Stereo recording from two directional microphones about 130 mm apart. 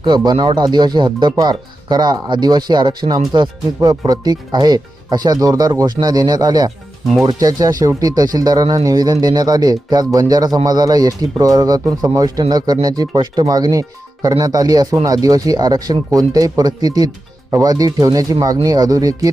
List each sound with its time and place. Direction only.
0.3 s speech: 35° right (ahead or behind)